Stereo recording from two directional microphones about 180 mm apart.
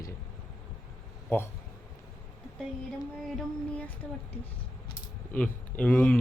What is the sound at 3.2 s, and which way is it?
Speech, 5° left (ahead or behind).